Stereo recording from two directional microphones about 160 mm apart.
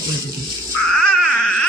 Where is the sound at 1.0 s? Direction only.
5° left (ahead or behind).